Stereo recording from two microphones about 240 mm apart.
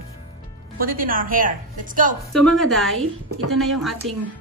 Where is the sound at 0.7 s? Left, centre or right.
Right.